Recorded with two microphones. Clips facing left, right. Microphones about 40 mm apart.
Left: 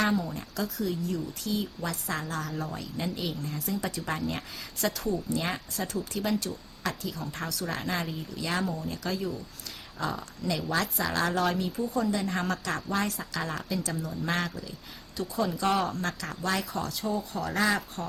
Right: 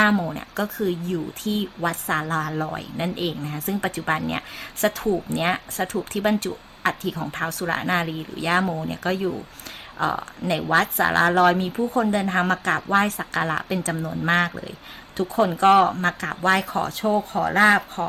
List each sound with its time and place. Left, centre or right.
0.0 s a woman's voice: right